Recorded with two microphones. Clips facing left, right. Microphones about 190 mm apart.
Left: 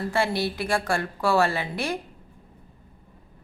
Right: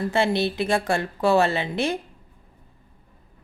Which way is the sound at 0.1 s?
25° right (ahead or behind).